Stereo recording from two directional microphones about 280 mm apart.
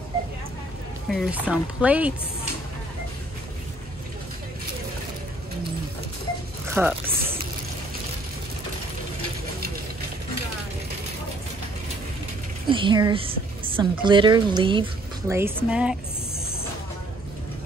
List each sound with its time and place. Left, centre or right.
1.0 s speech: centre
6.7 s speech: centre
12.6 s a woman's voice: centre